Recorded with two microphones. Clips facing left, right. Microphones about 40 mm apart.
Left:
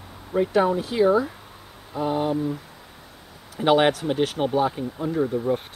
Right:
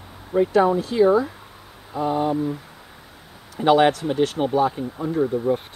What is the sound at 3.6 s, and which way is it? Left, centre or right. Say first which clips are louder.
Speech: right 2 dB; centre.